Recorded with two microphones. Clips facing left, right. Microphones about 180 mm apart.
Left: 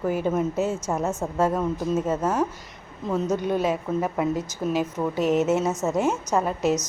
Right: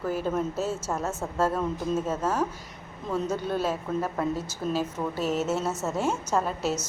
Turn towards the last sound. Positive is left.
turn(degrees=10)  # may be behind; listen again after turning